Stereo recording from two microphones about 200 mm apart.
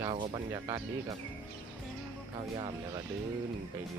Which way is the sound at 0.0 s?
25° right (ahead or behind).